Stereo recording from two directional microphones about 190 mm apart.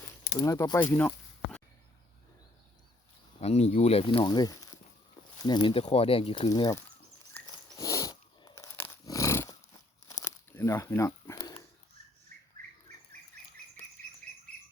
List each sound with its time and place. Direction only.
0.3 s speech: 15° left (ahead or behind)
3.4 s speech: 35° left (ahead or behind); by 6.8 s 20° left (ahead or behind)
7.4 s dog: 20° left (ahead or behind)
10.1 s crumpling: 15° left (ahead or behind)